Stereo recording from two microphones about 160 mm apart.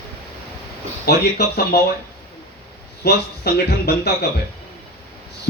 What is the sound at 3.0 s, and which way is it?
Speech, 85° left.